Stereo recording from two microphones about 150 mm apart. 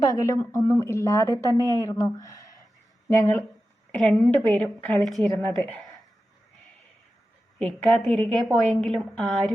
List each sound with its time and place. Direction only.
0.0 s a woman's voice: 25° left (ahead or behind)
3.9 s a woman's voice: 5° left (ahead or behind)
7.6 s a woman's voice: centre (ahead or behind)